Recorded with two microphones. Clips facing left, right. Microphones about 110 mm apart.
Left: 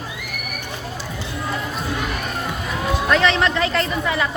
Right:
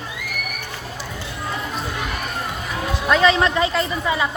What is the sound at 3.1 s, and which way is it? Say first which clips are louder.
A woman's voice: right 2 dB; 10° right (ahead or behind).